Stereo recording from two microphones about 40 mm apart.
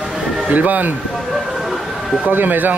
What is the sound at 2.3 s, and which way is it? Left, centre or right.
Speech, right.